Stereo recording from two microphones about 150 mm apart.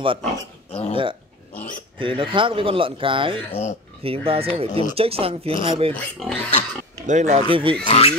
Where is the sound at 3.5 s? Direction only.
45° left (ahead or behind).